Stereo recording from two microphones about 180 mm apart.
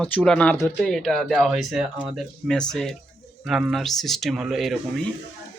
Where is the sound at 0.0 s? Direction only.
5° left (ahead or behind).